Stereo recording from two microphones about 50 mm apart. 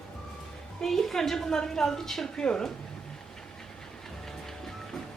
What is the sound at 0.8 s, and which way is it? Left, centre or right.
A woman's voice, centre.